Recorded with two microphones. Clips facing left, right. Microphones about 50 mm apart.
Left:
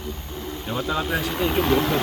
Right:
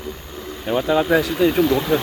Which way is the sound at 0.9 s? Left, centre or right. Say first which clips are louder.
Right 8 dB; right.